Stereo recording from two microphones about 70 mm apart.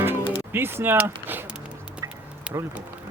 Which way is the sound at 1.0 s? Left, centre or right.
Right.